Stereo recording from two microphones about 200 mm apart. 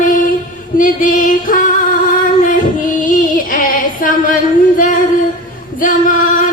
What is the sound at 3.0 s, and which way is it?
Music, 45° left (ahead or behind).